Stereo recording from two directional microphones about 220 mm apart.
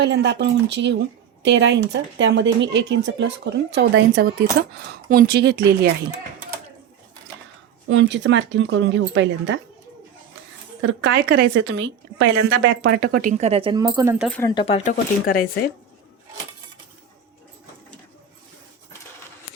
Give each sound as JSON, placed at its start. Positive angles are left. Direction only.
{"t": 0.0, "sound": "speech", "side_deg": -50}
{"t": 7.9, "sound": "a woman's voice", "side_deg": -55}
{"t": 10.8, "sound": "a woman's voice", "side_deg": -55}
{"t": 13.0, "sound": "speech", "side_deg": -40}
{"t": 14.3, "sound": "speech", "side_deg": 5}
{"t": 14.5, "sound": "speech", "side_deg": 25}
{"t": 15.3, "sound": "speech", "side_deg": 40}